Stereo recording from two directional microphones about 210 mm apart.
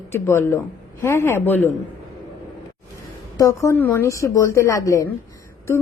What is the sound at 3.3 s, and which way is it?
A woman's voice, 15° left (ahead or behind).